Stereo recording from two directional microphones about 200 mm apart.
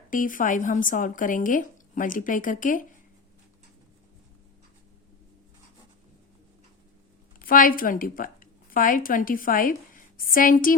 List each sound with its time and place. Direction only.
0.1 s speech: 40° left (ahead or behind)
7.3 s a woman's voice: 45° left (ahead or behind)